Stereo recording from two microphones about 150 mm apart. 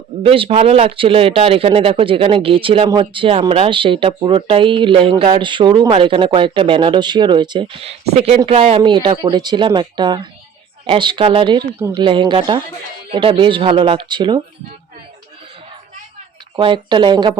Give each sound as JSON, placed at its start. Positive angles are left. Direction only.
{"t": 0.2, "sound": "speech", "side_deg": -35}
{"t": 8.8, "sound": "speech", "side_deg": -30}
{"t": 16.6, "sound": "speech", "side_deg": -30}